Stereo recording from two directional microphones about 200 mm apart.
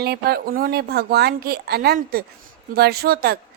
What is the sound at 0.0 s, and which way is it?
A woman's voice, 50° right (ahead or behind).